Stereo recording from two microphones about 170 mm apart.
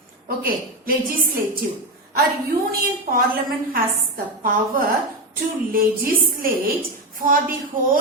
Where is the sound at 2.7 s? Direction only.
60° right (ahead or behind).